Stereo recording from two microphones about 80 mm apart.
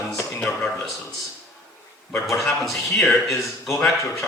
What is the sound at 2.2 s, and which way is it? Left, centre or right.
A man's voice, centre.